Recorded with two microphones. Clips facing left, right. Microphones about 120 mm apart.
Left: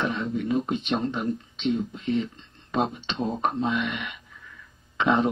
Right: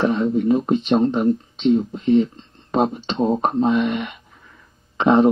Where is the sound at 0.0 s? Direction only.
40° right (ahead or behind).